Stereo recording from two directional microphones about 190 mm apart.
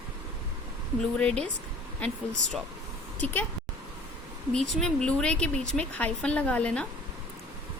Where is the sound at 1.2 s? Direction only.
5° left (ahead or behind).